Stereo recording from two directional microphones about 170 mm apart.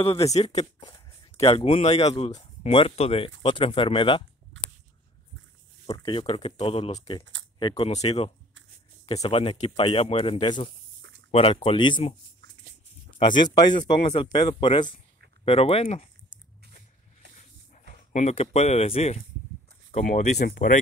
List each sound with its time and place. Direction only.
0.0 s speech: 35° left (ahead or behind)
4.6 s a sound: 90° right
5.9 s speech: 25° left (ahead or behind)
7.9 s speech: 40° left (ahead or behind)
11.0 s a sound: 90° right
11.3 s speech: 35° left (ahead or behind)
13.2 s speech: 25° left (ahead or behind)
18.1 s speech: 40° left (ahead or behind); by 20.8 s 55° left (ahead or behind)